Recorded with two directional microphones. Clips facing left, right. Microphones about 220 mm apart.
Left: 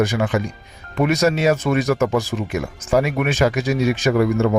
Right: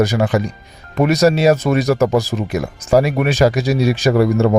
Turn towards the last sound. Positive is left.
turn(degrees=-35)  # may be behind; listen again after turning